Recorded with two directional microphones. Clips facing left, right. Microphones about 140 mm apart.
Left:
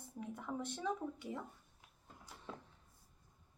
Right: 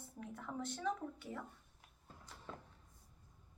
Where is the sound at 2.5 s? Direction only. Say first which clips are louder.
Left 1 dB; 5° left (ahead or behind).